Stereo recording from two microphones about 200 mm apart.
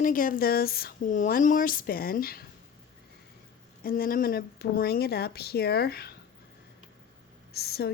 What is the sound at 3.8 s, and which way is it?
Speech, 45° left (ahead or behind).